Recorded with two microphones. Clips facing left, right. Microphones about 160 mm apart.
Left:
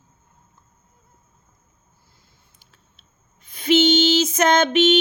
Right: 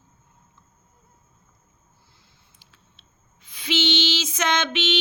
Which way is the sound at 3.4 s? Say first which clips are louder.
Left 9 dB; 50° left (ahead or behind).